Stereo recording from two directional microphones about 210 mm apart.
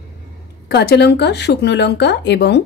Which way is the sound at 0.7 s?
50° left (ahead or behind).